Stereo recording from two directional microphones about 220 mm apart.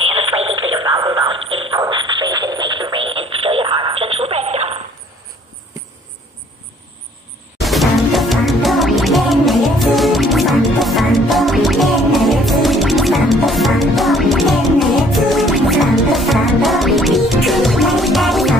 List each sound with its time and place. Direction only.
0.0 s radio: 25° right (ahead or behind)
1.7 s music: 20° right (ahead or behind)
3.2 s radio: 25° right (ahead or behind)
7.5 s music: centre (ahead or behind)